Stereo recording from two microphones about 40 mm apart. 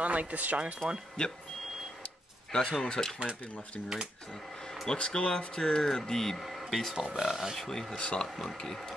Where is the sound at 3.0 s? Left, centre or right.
Centre.